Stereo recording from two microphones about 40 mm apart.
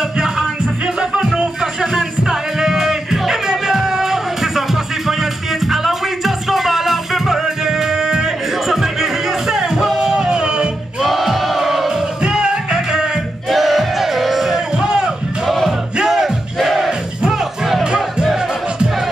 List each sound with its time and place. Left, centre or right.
1.1 s music: centre
11.1 s crowd: centre
11.9 s music: centre
13.5 s music: centre
15.4 s music: centre
16.0 s music: centre